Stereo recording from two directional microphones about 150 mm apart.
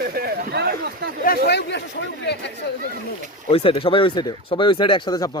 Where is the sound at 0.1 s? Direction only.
85° right.